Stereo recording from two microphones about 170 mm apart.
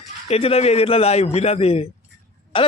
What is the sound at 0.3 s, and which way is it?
A man's voice, 35° left (ahead or behind).